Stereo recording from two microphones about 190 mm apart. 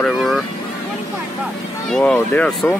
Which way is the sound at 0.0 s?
Centre (ahead or behind).